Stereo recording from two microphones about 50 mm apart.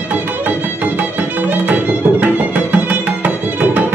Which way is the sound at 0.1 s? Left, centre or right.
Right.